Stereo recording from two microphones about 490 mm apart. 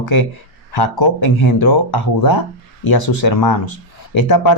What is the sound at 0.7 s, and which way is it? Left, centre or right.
Speech, left.